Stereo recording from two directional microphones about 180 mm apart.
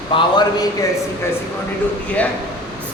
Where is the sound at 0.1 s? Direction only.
30° left (ahead or behind).